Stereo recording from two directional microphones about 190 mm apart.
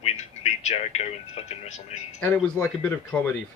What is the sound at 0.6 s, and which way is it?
Speech, 35° left (ahead or behind).